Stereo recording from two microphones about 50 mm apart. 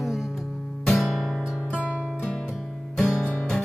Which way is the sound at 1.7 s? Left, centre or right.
Right.